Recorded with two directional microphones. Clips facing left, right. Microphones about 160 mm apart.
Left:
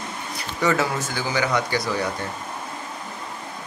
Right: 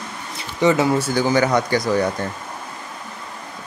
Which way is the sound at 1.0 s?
45° right (ahead or behind).